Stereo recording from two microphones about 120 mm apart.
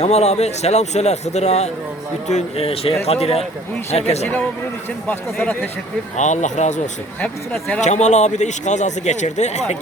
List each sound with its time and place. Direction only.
0.0 s a man's voice: 65° left (ahead or behind)
5.0 s speech: 15° left (ahead or behind)
6.1 s speech: 85° left
7.2 s speech: 10° left (ahead or behind)
7.8 s a man's voice: 75° left (ahead or behind)